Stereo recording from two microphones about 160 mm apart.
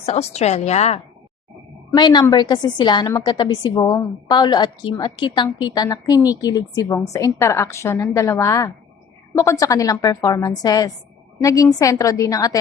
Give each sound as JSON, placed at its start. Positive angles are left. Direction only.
{"t": 0.0, "sound": "a woman's voice", "side_deg": 40}
{"t": 2.0, "sound": "a woman's voice", "side_deg": 25}